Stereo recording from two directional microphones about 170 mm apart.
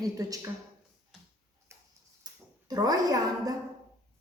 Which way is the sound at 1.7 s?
15° right (ahead or behind).